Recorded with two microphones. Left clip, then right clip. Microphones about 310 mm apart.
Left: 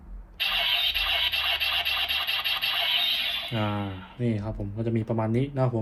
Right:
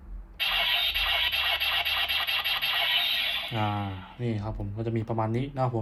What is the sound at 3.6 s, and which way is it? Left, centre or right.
A man's voice, centre.